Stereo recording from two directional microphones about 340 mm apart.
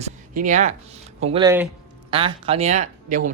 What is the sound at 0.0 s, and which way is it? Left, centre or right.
Speech, right.